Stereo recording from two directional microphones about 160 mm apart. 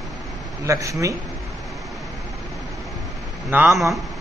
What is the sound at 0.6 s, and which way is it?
Speech, 20° right (ahead or behind).